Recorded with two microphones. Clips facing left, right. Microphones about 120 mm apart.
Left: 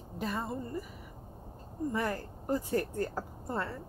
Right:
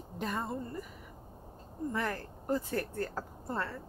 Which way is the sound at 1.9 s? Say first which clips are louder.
Left 2 dB; 15° left (ahead or behind).